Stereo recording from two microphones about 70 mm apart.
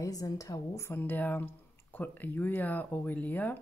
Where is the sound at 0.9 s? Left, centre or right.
Left.